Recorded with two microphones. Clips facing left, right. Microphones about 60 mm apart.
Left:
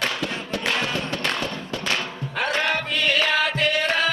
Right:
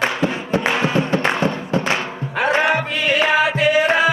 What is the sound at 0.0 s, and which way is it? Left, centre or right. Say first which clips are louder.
Music: right 6 dB; right.